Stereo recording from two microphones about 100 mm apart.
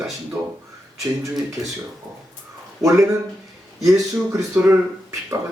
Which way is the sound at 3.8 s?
35° right (ahead or behind).